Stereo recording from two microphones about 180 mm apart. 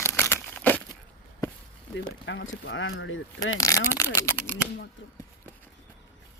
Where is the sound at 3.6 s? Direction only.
15° left (ahead or behind).